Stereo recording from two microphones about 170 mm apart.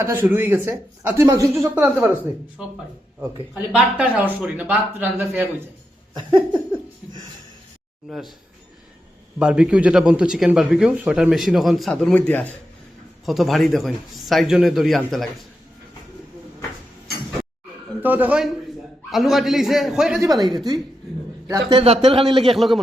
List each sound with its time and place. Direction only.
0.0 s a man's voice: 15° right (ahead or behind)
6.1 s a man's voice: 25° right (ahead or behind)
8.1 s a man's voice: centre (ahead or behind)
9.4 s a man's voice: 5° right (ahead or behind); by 12.5 s 10° left (ahead or behind)
13.2 s a man's voice: centre (ahead or behind)
18.0 s a man's voice: 10° right (ahead or behind)
20.2 s a man's voice: 25° right (ahead or behind)
21.7 s speech: 35° right (ahead or behind)
22.5 s a man's voice: centre (ahead or behind)